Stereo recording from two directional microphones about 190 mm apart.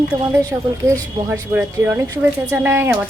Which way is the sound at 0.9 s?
10° right (ahead or behind).